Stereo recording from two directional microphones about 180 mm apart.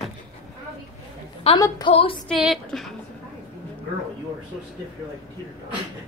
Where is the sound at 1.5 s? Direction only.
35° left (ahead or behind).